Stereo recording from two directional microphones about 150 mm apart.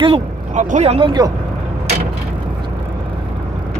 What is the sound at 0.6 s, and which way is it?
Speech, 50° right (ahead or behind).